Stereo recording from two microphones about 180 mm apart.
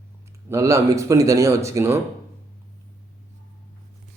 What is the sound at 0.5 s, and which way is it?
A man's voice, 15° right (ahead or behind).